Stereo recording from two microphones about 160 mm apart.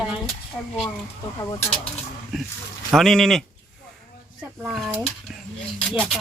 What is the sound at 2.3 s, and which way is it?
Speech, centre (ahead or behind).